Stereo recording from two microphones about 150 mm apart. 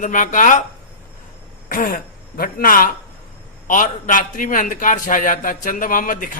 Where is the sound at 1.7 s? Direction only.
70° left (ahead or behind).